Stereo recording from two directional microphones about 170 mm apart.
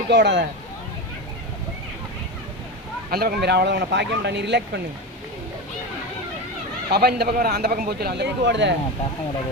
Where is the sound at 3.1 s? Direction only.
65° right (ahead or behind); by 4.6 s 90° right.